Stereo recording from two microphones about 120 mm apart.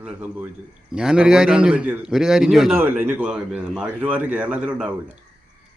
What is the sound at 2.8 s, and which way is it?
Speech, 15° right (ahead or behind).